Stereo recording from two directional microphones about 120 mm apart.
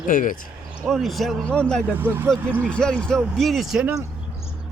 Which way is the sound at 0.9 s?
Centre (ahead or behind).